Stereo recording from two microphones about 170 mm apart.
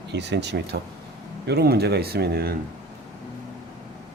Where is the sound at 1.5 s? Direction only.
70° right (ahead or behind).